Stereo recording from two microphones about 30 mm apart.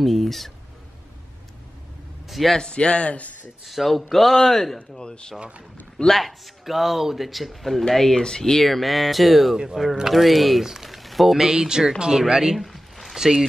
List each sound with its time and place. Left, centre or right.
0.0 s speech: centre
2.2 s a sound: centre
2.7 s speech: left
3.6 s speech: centre
4.7 s speech: left
6.0 s speech: centre
7.9 s speech: centre
8.6 s speech: centre
10.6 s speech: centre
10.9 s a sound: centre
11.3 s speech: centre
12.5 s a sound: centre
13.1 s speech: centre